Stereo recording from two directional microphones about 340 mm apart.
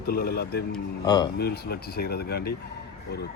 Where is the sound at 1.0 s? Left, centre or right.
Centre.